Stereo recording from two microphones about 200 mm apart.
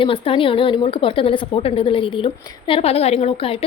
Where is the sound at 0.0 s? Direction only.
25° left (ahead or behind).